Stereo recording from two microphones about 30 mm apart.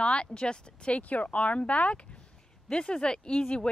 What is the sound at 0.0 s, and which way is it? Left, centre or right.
Speech, left.